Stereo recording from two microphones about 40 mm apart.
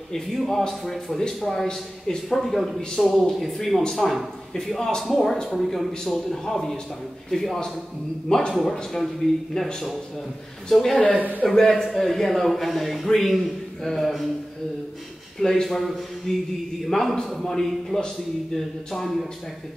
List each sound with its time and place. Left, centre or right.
0.1 s speech: centre
8.9 s speech: centre
10.7 s speech: centre
11.1 s a man's voice: right
11.4 s speech: centre
15.4 s speech: centre